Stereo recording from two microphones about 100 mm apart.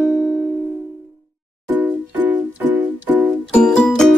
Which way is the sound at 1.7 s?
20° right (ahead or behind).